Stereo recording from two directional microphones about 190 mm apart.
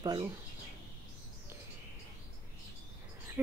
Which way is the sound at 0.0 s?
20° right (ahead or behind).